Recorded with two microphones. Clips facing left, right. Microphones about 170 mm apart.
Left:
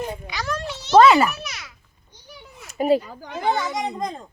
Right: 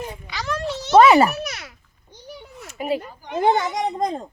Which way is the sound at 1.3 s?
45° right (ahead or behind).